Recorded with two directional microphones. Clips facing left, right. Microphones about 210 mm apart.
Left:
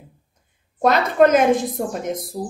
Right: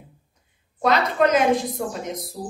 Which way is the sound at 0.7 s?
50° left (ahead or behind).